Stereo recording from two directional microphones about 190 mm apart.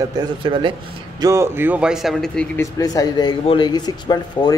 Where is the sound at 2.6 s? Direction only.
15° left (ahead or behind).